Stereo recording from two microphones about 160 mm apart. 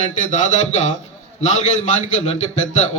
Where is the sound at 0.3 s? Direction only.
50° left (ahead or behind).